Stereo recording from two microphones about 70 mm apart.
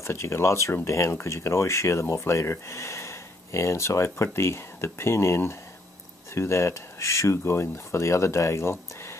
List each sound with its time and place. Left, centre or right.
0.0 s speech: left